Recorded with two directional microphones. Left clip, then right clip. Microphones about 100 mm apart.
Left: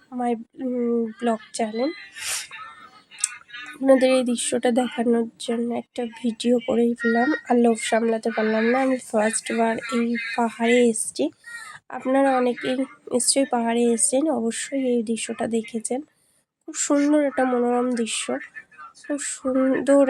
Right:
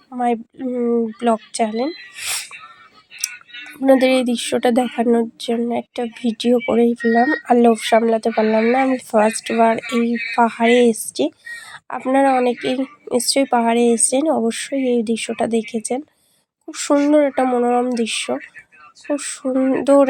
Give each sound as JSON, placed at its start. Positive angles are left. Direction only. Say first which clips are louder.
{"t": 0.2, "sound": "speech", "louder": "right 6 dB", "side_deg": -35}
{"t": 0.7, "sound": "speech", "louder": "right 5 dB", "side_deg": -25}
{"t": 2.1, "sound": "a sound", "louder": "right 4 dB", "side_deg": -20}
{"t": 3.8, "sound": "a woman's voice", "louder": "right 3 dB", "side_deg": -35}